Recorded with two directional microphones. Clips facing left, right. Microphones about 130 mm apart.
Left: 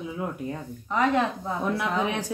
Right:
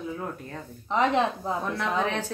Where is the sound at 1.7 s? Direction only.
15° left (ahead or behind).